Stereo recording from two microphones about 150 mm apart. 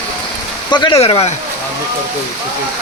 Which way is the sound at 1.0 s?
45° left (ahead or behind).